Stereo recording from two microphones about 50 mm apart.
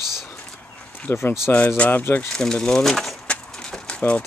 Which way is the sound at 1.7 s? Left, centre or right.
Left.